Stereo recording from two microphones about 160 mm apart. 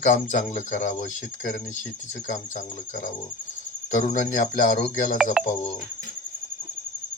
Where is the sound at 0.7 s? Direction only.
50° left (ahead or behind).